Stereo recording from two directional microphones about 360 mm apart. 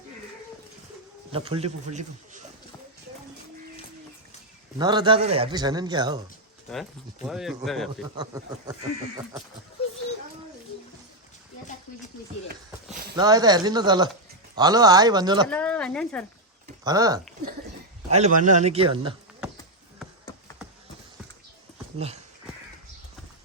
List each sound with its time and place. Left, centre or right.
1.3 s a man's voice: centre
4.8 s a man's voice: centre
7.3 s speech: centre
8.1 s a man's voice: centre
12.9 s a sound: right
13.1 s a man's voice: centre
15.4 s a woman's voice: centre
16.8 s a man's voice: centre
20.0 s a sound: centre
21.9 s a sound: centre